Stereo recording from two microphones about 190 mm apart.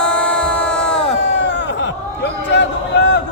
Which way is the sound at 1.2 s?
65° left (ahead or behind).